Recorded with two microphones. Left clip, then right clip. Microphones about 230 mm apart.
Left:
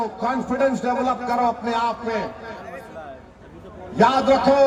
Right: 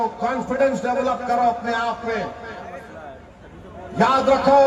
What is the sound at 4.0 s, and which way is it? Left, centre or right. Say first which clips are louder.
Speech: even; left.